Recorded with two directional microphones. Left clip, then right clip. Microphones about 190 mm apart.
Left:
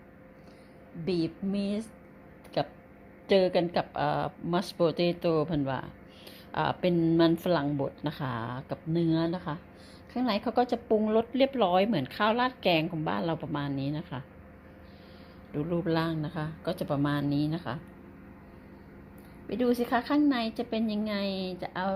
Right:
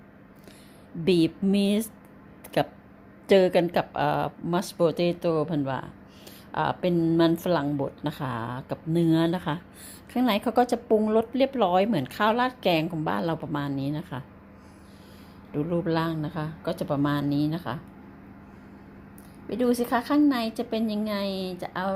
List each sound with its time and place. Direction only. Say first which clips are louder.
1.0 s a sound: right 8 dB; 30° right (ahead or behind)
2.6 s a woman's voice: right 5 dB; 20° right (ahead or behind)
15.5 s a woman's voice: right 3 dB; centre (ahead or behind)
19.5 s a woman's voice: right 3 dB; centre (ahead or behind)